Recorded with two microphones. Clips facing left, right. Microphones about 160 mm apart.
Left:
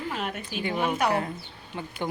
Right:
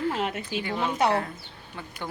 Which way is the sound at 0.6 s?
20° left (ahead or behind).